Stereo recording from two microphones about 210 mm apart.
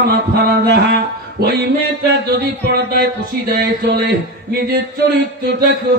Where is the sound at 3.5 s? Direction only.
50° right (ahead or behind).